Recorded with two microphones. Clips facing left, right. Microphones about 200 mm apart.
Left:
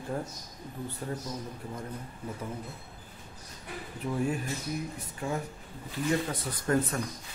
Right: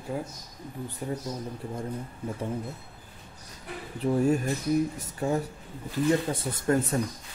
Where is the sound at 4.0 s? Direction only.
30° right (ahead or behind).